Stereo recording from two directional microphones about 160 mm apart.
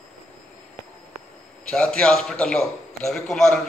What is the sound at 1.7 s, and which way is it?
A man's voice, 5° left (ahead or behind).